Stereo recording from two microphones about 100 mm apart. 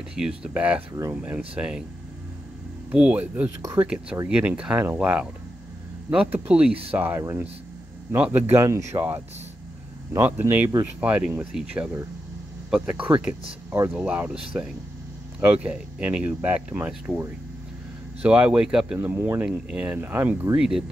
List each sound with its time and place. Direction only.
0.1 s speech: 10° right (ahead or behind)
2.9 s speech: 10° right (ahead or behind)
8.6 s speech: 30° right (ahead or behind)
10.1 s speech: 25° right (ahead or behind)
13.7 s speech: 25° right (ahead or behind)
13.9 s speech: 10° right (ahead or behind)
18.2 s speech: 15° right (ahead or behind)
19.0 s speech: 20° right (ahead or behind)
20.5 s speech: 5° right (ahead or behind)